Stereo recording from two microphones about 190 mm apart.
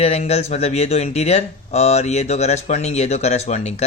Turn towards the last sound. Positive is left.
turn(degrees=35)  # may be behind; listen again after turning